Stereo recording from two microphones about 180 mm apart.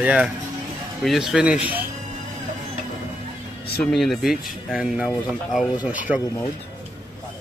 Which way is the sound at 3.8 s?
Centre (ahead or behind).